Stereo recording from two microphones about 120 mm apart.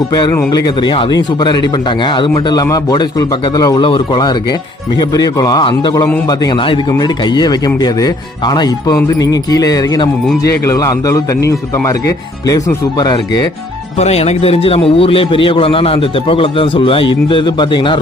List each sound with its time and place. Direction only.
0.1 s a man's voice: 35° left (ahead or behind)
2.3 s a man's voice: 30° left (ahead or behind)
3.8 s a man's voice: 45° left (ahead or behind)
14.0 s a man's voice: 60° left (ahead or behind); by 18.0 s 45° left (ahead or behind)